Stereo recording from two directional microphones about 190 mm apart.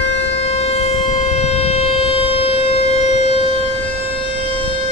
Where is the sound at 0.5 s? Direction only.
30° left (ahead or behind).